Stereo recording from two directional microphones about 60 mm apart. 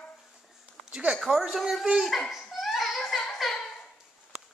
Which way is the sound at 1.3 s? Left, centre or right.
Centre.